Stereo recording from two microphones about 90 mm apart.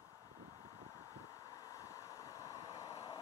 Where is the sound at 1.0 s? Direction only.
40° left (ahead or behind).